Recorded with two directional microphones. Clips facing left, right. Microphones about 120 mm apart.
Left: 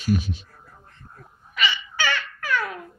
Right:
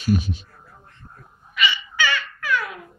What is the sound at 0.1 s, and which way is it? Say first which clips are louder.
Speech: right 2 dB; 15° right (ahead or behind).